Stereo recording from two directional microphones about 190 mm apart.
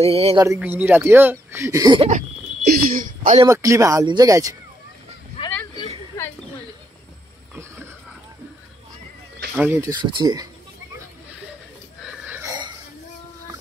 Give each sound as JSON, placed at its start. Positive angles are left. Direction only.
{"t": 0.0, "sound": "speech", "side_deg": -30}
{"t": 0.6, "sound": "speech", "side_deg": -10}
{"t": 2.0, "sound": "speech", "side_deg": -35}
{"t": 3.4, "sound": "speech", "side_deg": -15}
{"t": 5.4, "sound": "a sound", "side_deg": 30}
{"t": 9.6, "sound": "speech", "side_deg": -15}
{"t": 12.3, "sound": "a sound", "side_deg": -15}